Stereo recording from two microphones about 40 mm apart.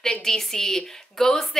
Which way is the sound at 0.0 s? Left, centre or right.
Centre.